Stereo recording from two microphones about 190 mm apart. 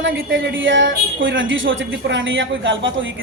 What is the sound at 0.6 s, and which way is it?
A woman's voice, 80° right.